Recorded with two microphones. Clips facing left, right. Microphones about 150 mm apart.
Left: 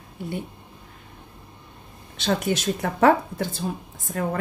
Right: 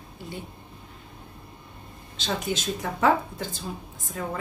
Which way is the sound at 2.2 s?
65° left (ahead or behind).